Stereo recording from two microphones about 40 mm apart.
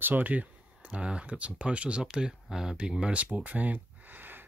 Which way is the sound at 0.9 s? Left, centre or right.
Right.